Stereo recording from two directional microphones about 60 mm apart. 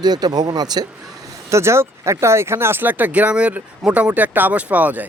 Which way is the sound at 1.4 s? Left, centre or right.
Right.